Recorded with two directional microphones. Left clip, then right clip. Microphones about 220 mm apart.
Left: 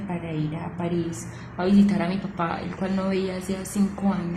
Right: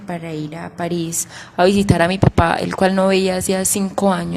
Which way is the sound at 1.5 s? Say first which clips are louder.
Right 9 dB; 45° right (ahead or behind).